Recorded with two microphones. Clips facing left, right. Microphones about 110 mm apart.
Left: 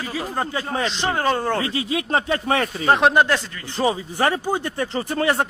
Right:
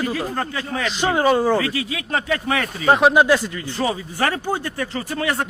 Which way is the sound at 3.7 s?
20° left (ahead or behind).